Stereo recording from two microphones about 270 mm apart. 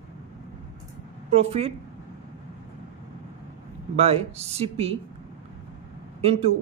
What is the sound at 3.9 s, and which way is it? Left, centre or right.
A man's voice, right.